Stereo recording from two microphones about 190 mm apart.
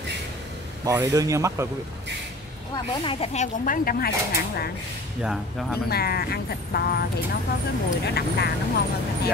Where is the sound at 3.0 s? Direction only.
30° left (ahead or behind); by 4.1 s 50° left (ahead or behind).